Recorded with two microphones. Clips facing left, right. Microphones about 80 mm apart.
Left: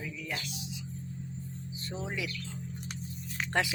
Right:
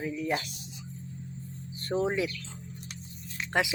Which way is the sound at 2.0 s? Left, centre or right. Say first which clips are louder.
Right 5 dB; right.